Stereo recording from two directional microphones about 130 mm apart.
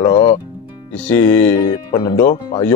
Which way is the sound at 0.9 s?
15° left (ahead or behind).